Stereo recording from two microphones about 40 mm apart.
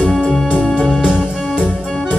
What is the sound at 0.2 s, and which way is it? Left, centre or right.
Music, centre.